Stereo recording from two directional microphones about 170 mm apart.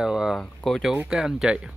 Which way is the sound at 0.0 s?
5° right (ahead or behind).